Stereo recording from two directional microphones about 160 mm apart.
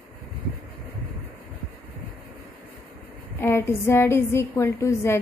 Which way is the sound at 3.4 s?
15° left (ahead or behind).